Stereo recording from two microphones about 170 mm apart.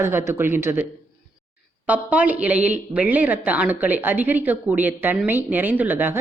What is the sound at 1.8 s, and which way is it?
Speech, 10° right (ahead or behind).